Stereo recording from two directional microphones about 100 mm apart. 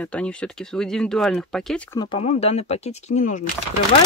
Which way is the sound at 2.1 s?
90° left.